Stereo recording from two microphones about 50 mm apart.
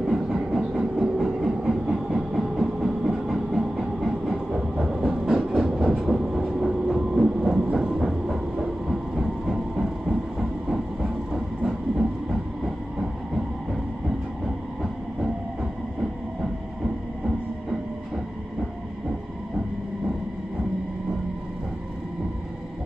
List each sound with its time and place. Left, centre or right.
0.0 s train: centre
2.5 s a sound: centre
5.3 s train: centre
5.9 s train: centre
16.8 s train: centre